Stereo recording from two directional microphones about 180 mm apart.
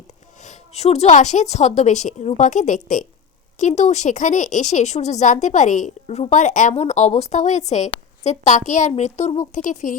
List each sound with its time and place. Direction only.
0.4 s a woman's voice: 40° left (ahead or behind)